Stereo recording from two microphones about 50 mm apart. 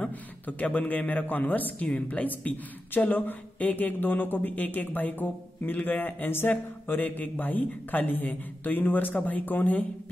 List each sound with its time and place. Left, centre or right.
0.0 s a man's voice: left